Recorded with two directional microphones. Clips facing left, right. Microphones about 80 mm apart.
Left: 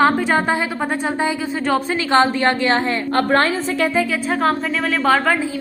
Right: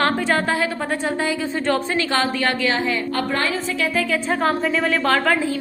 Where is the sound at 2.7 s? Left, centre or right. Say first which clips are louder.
Left 4 dB; left.